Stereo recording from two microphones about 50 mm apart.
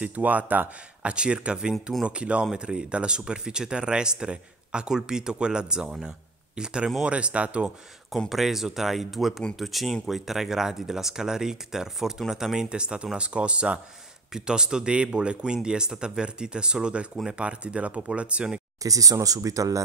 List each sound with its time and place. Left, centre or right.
0.0 s speech: right
1.0 s speech: right
8.3 s speech: centre